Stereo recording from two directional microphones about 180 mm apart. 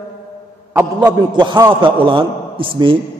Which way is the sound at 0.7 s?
20° right (ahead or behind).